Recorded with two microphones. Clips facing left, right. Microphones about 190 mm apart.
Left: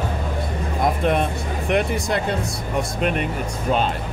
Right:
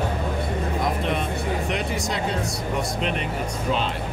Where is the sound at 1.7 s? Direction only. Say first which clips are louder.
Left 6 dB; 55° left (ahead or behind).